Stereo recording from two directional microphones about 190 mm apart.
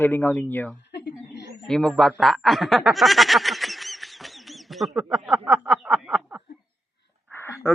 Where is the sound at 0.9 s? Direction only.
60° left (ahead or behind).